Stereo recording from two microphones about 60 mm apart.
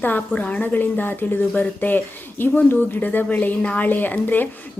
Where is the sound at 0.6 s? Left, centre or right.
Left.